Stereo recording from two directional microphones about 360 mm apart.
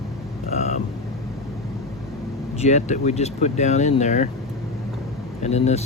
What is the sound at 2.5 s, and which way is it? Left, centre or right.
Speech, centre.